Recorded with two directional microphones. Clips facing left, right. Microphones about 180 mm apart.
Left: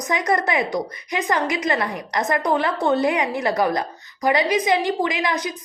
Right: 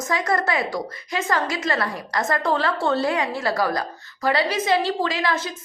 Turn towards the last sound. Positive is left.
turn(degrees=15)  # may be behind; listen again after turning